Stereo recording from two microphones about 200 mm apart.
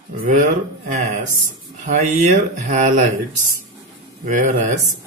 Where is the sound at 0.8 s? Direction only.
35° right (ahead or behind).